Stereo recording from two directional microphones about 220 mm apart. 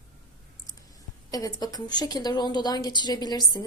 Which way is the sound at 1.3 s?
15° left (ahead or behind).